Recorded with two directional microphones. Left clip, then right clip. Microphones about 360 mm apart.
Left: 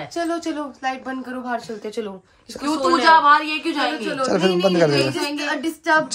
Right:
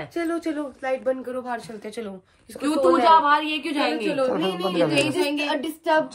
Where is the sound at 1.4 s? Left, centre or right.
Centre.